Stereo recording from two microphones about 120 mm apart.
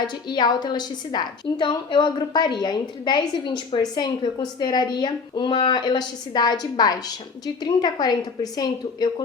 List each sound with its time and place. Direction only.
0.1 s a woman's voice: 40° left (ahead or behind)